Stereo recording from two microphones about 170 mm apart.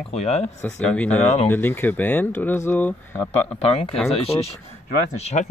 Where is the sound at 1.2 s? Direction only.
40° left (ahead or behind).